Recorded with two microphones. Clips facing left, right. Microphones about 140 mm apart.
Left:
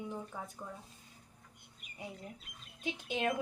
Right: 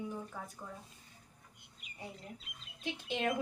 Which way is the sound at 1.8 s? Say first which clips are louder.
Right 2 dB; 50° left (ahead or behind).